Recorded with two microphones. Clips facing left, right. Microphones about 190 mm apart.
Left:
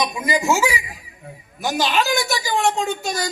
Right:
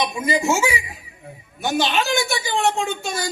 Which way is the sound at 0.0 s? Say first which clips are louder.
Even; 25° right (ahead or behind).